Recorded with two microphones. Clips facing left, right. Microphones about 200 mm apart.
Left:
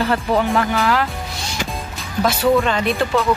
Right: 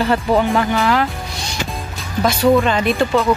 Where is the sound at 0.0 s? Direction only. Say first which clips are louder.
Right 2 dB; 5° right (ahead or behind).